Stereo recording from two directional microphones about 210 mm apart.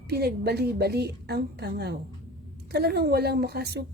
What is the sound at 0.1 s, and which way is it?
A woman's voice, 50° right (ahead or behind).